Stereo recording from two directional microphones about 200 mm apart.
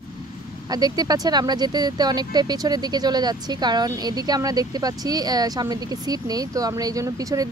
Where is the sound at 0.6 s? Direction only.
20° right (ahead or behind).